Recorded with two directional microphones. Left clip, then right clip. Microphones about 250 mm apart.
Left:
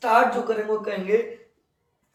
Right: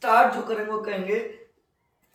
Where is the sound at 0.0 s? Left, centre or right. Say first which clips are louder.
Even; centre.